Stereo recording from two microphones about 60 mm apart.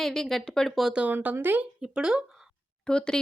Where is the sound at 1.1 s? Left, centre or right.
Right.